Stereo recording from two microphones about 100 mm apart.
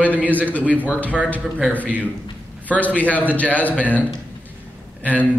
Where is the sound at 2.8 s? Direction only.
15° left (ahead or behind).